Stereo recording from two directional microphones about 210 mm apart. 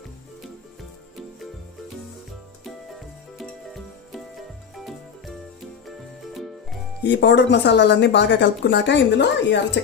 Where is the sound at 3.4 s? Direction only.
Centre (ahead or behind).